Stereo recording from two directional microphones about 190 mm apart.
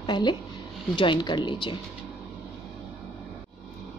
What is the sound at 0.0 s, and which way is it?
Speech, 25° left (ahead or behind).